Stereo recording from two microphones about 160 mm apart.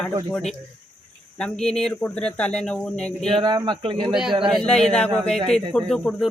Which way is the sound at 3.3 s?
30° right (ahead or behind).